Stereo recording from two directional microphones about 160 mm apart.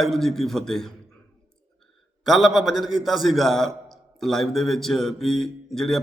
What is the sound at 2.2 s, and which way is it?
A man's voice, centre (ahead or behind).